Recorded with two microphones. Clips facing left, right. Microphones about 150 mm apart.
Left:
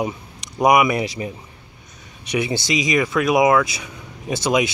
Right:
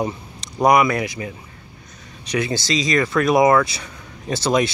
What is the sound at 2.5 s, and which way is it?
Speech, 15° left (ahead or behind).